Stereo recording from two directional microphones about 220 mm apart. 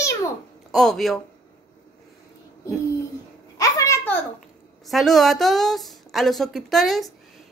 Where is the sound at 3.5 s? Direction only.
15° left (ahead or behind).